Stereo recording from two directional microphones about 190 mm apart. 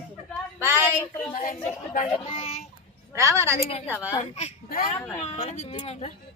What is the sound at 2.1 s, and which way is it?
Speech, 25° left (ahead or behind).